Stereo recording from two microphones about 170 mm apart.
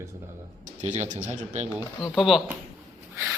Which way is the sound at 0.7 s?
45° right (ahead or behind).